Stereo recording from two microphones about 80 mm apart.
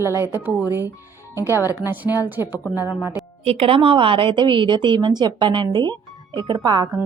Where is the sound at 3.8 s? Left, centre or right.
Right.